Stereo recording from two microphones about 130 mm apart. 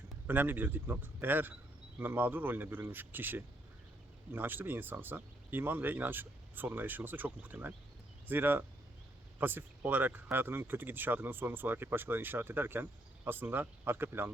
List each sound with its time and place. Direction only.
0.3 s speech: 15° right (ahead or behind)